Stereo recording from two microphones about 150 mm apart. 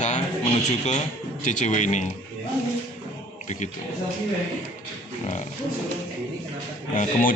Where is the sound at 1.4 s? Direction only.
55° left (ahead or behind).